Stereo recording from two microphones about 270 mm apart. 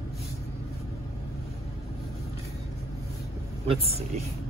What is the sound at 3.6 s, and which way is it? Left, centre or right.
Speech, right.